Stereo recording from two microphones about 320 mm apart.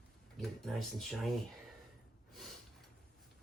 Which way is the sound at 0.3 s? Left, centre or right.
Centre.